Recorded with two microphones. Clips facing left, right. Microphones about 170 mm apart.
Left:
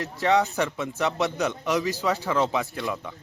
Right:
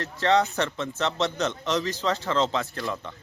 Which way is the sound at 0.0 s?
15° left (ahead or behind).